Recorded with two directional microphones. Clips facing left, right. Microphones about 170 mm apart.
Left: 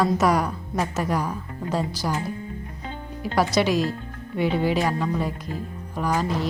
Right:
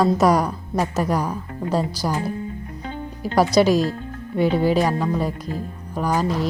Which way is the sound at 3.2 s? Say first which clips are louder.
Right 5 dB; 40° right (ahead or behind).